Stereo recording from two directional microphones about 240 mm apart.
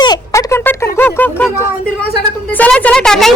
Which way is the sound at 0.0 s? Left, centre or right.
Centre.